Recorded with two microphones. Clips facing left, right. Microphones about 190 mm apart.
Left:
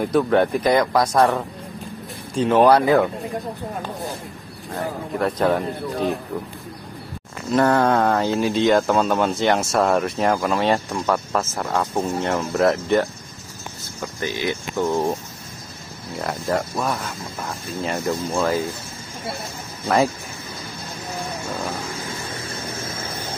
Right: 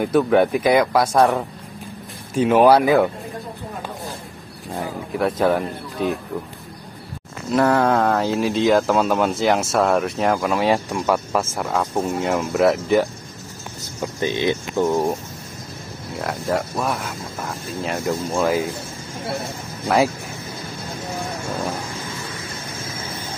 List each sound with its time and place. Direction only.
0.0 s speech: 5° right (ahead or behind)
5.2 s speech: centre (ahead or behind)
7.5 s speech: centre (ahead or behind)
14.2 s speech: 20° right (ahead or behind)
16.2 s speech: centre (ahead or behind)